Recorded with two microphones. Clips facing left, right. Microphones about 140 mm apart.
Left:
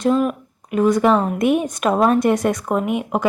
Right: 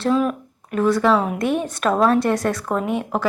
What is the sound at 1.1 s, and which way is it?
Speech, centre (ahead or behind).